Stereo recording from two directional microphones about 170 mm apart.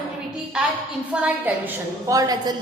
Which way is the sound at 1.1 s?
10° right (ahead or behind).